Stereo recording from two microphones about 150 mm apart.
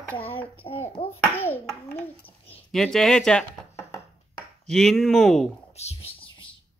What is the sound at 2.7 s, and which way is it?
Speech, 5° left (ahead or behind).